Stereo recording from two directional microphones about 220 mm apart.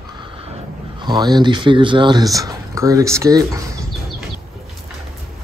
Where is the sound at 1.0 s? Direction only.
20° right (ahead or behind).